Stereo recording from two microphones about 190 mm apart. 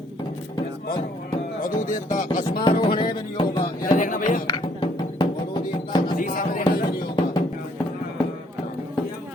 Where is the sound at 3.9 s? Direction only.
45° left (ahead or behind).